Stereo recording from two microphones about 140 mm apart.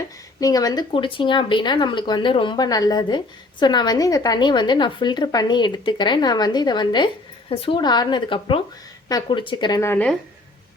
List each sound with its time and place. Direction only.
0.3 s speech: 25° left (ahead or behind)
9.8 s speech: 10° left (ahead or behind)